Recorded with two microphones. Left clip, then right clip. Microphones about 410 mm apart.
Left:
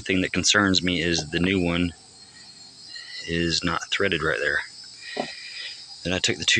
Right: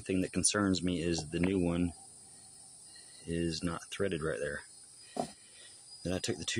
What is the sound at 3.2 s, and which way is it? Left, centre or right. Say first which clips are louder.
Speech: left 11 dB; right.